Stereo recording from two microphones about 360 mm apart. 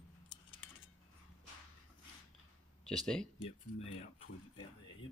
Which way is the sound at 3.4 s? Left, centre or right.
Centre.